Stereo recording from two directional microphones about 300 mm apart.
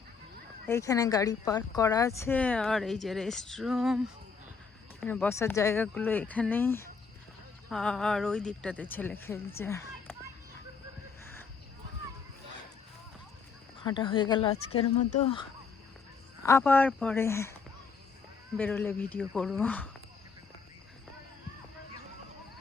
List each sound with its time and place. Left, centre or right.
0.7 s speech: centre
13.8 s speech: centre
18.5 s speech: centre